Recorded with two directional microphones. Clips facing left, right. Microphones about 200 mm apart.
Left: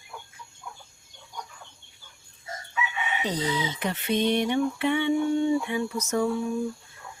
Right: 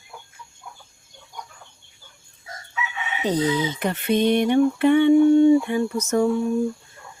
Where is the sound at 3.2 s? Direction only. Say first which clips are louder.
Right 8 dB; 50° right (ahead or behind).